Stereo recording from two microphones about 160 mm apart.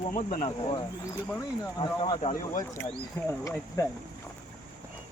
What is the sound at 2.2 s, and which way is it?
Speech, 55° left (ahead or behind).